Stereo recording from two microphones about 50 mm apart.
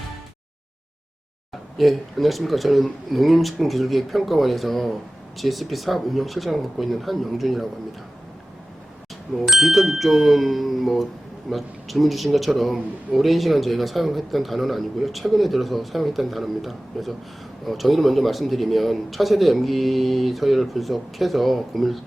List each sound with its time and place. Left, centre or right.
1.8 s a man's voice: centre
9.5 s a man's voice: centre